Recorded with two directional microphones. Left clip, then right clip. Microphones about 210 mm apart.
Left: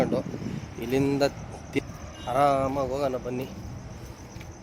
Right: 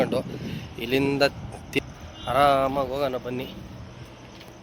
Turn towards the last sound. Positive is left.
turn(degrees=5)  # may be behind; listen again after turning